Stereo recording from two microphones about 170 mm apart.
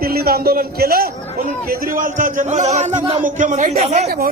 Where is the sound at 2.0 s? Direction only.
50° right (ahead or behind).